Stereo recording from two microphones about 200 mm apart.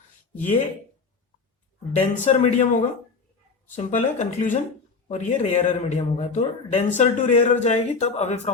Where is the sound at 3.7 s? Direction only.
35° left (ahead or behind).